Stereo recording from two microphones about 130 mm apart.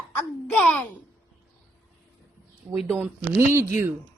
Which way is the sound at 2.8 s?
20° right (ahead or behind).